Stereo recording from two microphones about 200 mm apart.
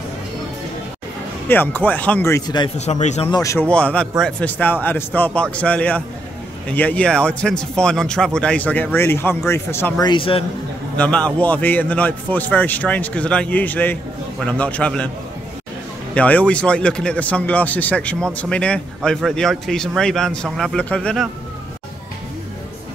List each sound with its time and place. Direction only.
1.5 s speech: 10° left (ahead or behind)
2.8 s speech: 35° left (ahead or behind)
3.3 s speech: 15° left (ahead or behind)
11.0 s speech: 5° left (ahead or behind)
16.2 s speech: 5° left (ahead or behind)